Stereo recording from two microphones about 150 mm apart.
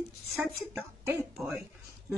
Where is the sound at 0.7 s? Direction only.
15° right (ahead or behind).